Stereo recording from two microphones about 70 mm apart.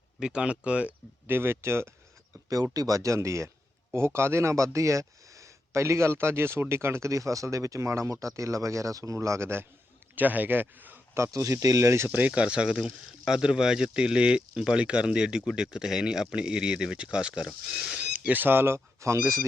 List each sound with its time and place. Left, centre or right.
0.2 s speech: centre
1.3 s speech: right
2.7 s speech: right
10.2 s speech: right
11.1 s speech: right
12.0 s speech: right; by 18.0 s centre
18.1 s speech: right